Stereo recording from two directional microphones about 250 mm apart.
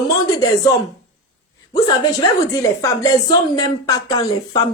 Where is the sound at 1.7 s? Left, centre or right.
Centre.